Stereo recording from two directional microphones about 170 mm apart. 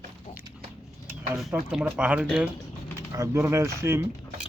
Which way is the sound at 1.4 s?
Centre (ahead or behind).